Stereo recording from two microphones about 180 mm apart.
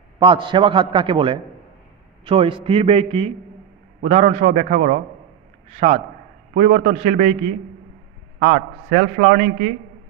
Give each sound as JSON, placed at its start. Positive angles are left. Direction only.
{"t": 0.2, "sound": "a man's voice", "side_deg": -25}